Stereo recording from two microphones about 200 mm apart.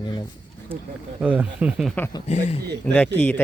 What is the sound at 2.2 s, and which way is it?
Speech, 35° left (ahead or behind).